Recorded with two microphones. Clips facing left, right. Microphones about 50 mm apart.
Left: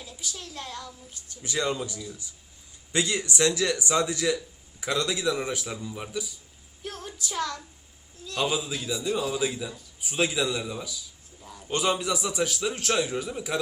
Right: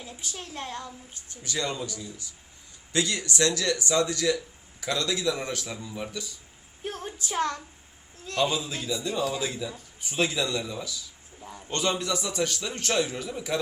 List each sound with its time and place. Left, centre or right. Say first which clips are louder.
0.0 s a woman's voice: even; right
1.5 s a man's voice: left 2 dB; centre
6.8 s a sound: right 2 dB; right
8.4 s a man's voice: right 1 dB; centre
8.9 s speech: right 1 dB; left
9.4 s a man's voice: left 2 dB; centre